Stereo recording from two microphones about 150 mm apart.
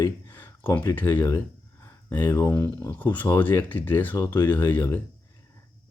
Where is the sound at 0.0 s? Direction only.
20° left (ahead or behind).